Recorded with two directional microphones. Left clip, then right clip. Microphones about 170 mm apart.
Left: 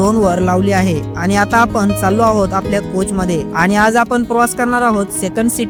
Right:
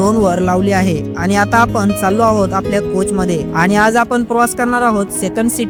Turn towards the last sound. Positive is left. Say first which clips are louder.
# even
turn(degrees=0)  # may be behind; listen again after turning